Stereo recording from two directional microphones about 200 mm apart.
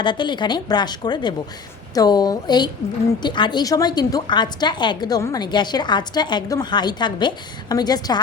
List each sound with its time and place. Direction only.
0.0 s a woman's voice: 25° left (ahead or behind)